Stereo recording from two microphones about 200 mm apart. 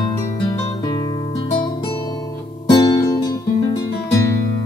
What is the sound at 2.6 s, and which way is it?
Music, 20° left (ahead or behind).